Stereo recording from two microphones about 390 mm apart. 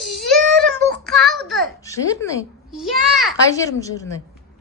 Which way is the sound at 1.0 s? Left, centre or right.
Centre.